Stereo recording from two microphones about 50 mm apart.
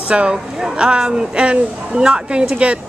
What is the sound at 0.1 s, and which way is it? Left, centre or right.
A woman's voice, right.